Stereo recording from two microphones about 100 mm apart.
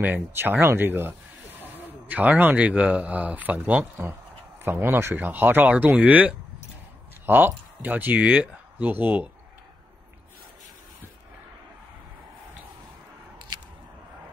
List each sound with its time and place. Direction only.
0.0 s speech: 20° right (ahead or behind)